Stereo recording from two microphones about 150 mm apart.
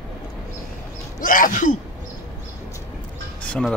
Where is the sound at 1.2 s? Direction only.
65° left (ahead or behind).